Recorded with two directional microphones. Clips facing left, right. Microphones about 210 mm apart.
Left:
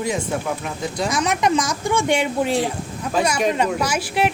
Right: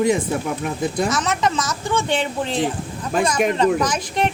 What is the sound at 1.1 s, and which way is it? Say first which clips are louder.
A woman's voice: left 1 dB; 15° left (ahead or behind).